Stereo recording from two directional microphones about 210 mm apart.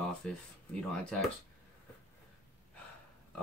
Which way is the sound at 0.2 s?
5° left (ahead or behind).